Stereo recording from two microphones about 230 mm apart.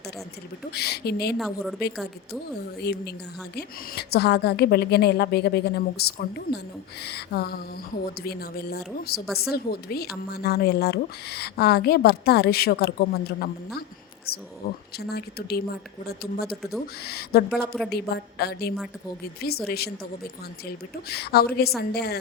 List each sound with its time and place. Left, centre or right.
0.7 s a woman's voice: left
1.4 s a woman's voice: centre
2.8 s a woman's voice: left
20.9 s a woman's voice: left